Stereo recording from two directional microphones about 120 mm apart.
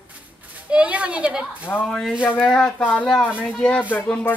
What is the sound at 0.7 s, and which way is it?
Speech, 10° right (ahead or behind).